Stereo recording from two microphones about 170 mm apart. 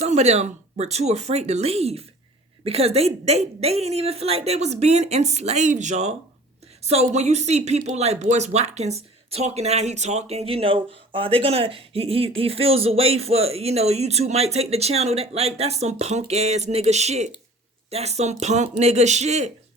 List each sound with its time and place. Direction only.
0.0 s speech: 40° right (ahead or behind)